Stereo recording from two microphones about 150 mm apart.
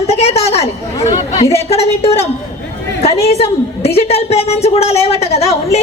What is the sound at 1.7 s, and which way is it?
A woman's voice, 40° left (ahead or behind).